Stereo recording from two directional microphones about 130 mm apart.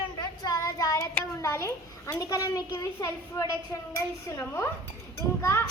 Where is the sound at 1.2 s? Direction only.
20° left (ahead or behind).